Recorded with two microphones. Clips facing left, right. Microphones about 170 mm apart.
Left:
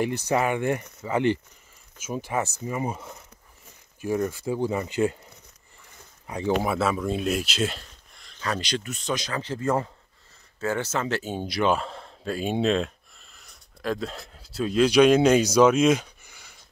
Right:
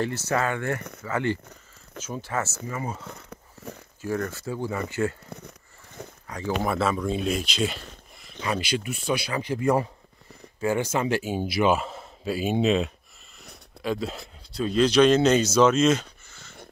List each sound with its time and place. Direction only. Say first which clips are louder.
0.0 s speech: left 2 dB; 15° left (ahead or behind)
6.2 s speech: left 4 dB; 20° left (ahead or behind)
6.6 s a man's voice: even; 5° left (ahead or behind)